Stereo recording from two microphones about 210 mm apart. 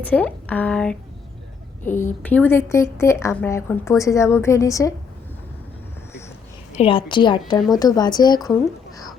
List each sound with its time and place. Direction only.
0.0 s a woman's voice: 5° left (ahead or behind)
6.7 s a woman's voice: 25° left (ahead or behind)